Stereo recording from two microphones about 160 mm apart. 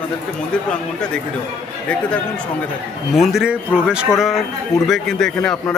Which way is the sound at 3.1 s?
Centre (ahead or behind).